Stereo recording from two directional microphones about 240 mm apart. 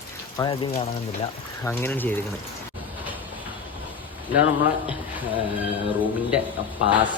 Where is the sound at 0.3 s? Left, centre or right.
Centre.